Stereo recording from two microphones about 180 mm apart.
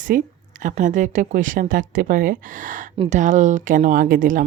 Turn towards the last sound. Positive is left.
turn(degrees=-50)  # may be behind; listen again after turning